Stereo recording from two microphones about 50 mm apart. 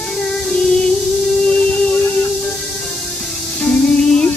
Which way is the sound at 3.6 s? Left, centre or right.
Centre.